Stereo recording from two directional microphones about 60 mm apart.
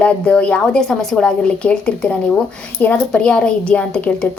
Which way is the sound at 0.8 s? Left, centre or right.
Centre.